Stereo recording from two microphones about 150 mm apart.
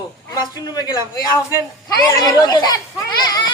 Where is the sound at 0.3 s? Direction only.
25° left (ahead or behind).